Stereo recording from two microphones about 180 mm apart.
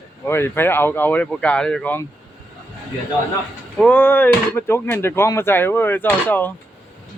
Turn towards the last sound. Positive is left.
turn(degrees=10)  # may be behind; listen again after turning